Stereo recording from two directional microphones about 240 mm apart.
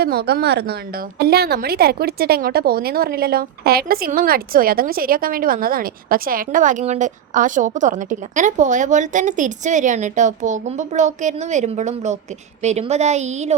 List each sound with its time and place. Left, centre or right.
0.0 s a woman's voice: right